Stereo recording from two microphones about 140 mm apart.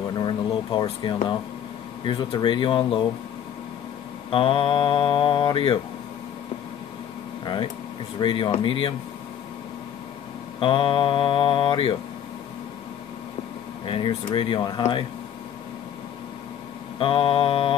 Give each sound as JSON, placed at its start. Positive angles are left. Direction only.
{"t": 0.2, "sound": "speech", "side_deg": 35}
{"t": 2.0, "sound": "mantra", "side_deg": 35}
{"t": 4.3, "sound": "mantra", "side_deg": 40}
{"t": 7.4, "sound": "mantra", "side_deg": 35}
{"t": 10.6, "sound": "mantra", "side_deg": 40}
{"t": 13.8, "sound": "mantra", "side_deg": 40}
{"t": 17.0, "sound": "mantra", "side_deg": 40}